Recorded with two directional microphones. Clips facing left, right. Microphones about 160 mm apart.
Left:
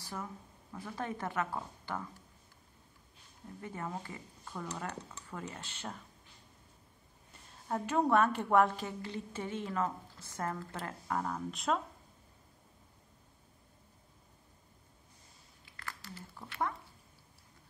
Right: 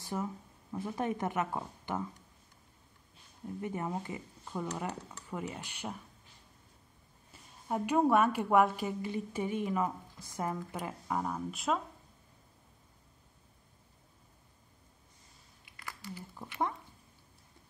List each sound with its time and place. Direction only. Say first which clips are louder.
0.0 s speech: right 6 dB; 20° right (ahead or behind)
3.6 s a woman's voice: right 4 dB; 20° right (ahead or behind)
7.6 s a woman's voice: right 3 dB; 15° right (ahead or behind)
15.6 s a sound: right 2 dB; 15° right (ahead or behind)